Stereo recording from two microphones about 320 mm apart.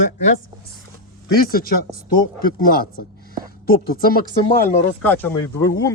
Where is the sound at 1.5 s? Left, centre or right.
Left.